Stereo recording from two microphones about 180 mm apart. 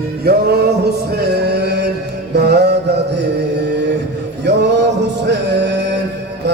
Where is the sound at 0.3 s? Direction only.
60° right (ahead or behind).